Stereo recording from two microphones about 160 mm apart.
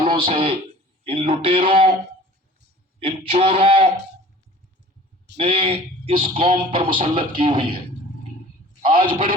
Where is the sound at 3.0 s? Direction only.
35° right (ahead or behind).